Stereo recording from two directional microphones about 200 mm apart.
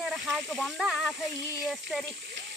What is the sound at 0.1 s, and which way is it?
Speech, centre (ahead or behind).